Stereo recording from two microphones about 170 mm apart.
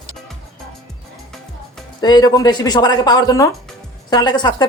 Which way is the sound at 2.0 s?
25° left (ahead or behind).